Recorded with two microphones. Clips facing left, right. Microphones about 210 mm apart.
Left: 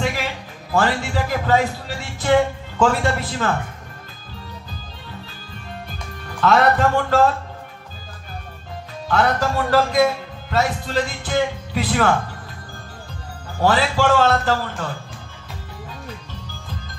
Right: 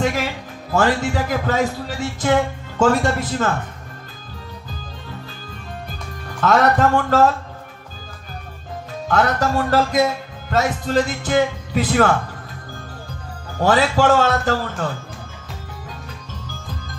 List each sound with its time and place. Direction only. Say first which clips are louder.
0.0 s music: right 3 dB; 45° right (ahead or behind)
0.7 s a man's voice: right 2 dB; 45° right (ahead or behind)
6.4 s a man's voice: right 1 dB; 45° right (ahead or behind)
9.0 s a man's voice: right 1 dB; 45° right (ahead or behind)
13.6 s a man's voice: right 2 dB; 45° right (ahead or behind)